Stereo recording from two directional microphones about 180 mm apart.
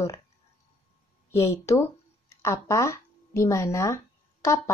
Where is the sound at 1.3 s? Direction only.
15° left (ahead or behind).